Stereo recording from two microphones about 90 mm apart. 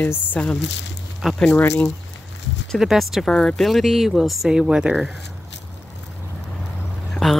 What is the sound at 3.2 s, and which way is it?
Speech, 5° left (ahead or behind).